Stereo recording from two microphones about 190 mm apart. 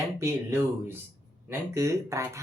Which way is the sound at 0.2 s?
15° right (ahead or behind).